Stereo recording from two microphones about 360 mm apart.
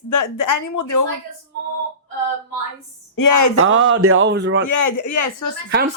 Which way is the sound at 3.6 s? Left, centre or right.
Right.